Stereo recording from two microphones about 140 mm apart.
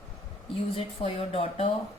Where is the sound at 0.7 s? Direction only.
45° left (ahead or behind).